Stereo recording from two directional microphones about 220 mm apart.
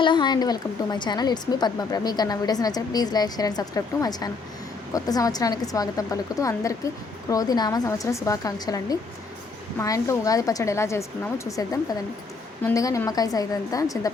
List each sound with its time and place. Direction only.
0.0 s a woman's voice: 20° left (ahead or behind)